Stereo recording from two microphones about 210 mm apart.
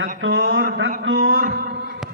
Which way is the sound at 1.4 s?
50° right (ahead or behind).